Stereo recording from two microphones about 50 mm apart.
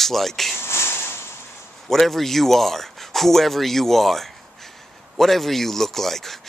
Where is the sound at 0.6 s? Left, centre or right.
Left.